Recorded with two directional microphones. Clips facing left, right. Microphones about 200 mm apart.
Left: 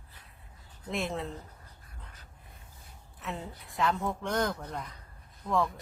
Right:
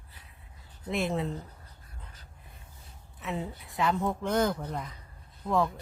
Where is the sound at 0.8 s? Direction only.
Centre (ahead or behind).